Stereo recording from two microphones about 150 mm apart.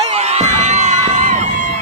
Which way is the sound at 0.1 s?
45° right (ahead or behind).